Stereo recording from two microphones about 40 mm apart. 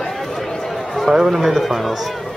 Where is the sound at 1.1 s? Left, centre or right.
Centre.